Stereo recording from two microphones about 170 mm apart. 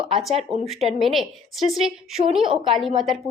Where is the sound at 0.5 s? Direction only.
40° right (ahead or behind).